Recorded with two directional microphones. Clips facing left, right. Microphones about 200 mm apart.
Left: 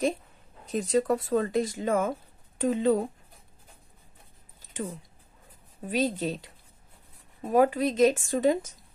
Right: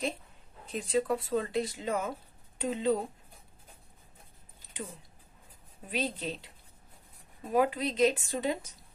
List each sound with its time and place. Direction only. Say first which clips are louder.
0.7 s speech: left 5 dB; 40° left (ahead or behind)
5.9 s speech: left 7 dB; 45° left (ahead or behind)